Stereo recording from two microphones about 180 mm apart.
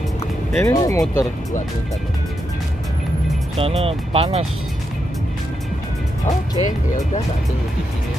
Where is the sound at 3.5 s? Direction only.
30° right (ahead or behind).